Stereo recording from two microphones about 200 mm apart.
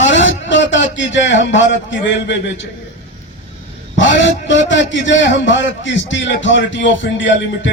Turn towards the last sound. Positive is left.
turn(degrees=65)  # may be behind; listen again after turning